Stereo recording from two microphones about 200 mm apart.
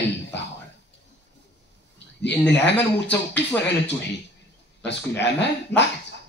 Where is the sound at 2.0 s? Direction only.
60° left (ahead or behind).